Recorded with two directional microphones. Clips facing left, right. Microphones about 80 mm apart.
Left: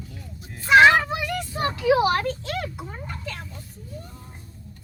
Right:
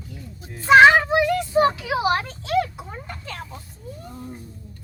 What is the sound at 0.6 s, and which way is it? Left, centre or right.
Speech, right.